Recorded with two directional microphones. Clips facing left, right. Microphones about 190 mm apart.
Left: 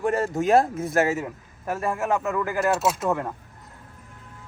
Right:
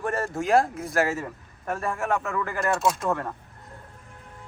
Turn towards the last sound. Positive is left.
turn(degrees=15)  # may be behind; listen again after turning